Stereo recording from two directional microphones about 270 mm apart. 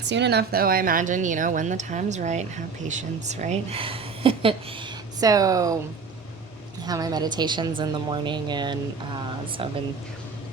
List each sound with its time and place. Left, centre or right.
0.0 s a woman's voice: right; by 5.8 s centre
6.8 s a woman's voice: centre